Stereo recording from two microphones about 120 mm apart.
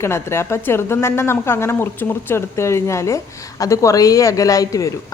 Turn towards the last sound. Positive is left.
turn(degrees=30)  # may be behind; listen again after turning